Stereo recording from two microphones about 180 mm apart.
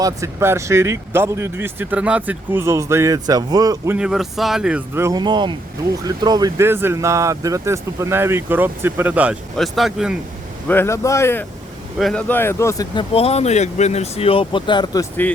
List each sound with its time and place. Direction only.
0.0 s speech: 15° right (ahead or behind)
3.9 s speech: 5° right (ahead or behind)
4.9 s speech: 20° right (ahead or behind); by 10.2 s centre (ahead or behind)
10.7 s speech: 15° left (ahead or behind)
11.9 s speech: centre (ahead or behind)
12.3 s speech: 15° left (ahead or behind)
13.1 s speech: 35° left (ahead or behind)
15.2 s speech: 10° left (ahead or behind)